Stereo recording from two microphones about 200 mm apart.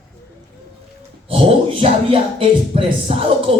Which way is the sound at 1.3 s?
30° right (ahead or behind).